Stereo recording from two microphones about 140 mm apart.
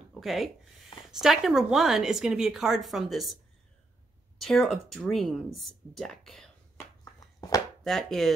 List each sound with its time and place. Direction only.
0.1 s a woman's voice: centre (ahead or behind)
4.4 s a woman's voice: centre (ahead or behind)
7.3 s chopping: 25° left (ahead or behind)
7.8 s a woman's voice: 5° left (ahead or behind)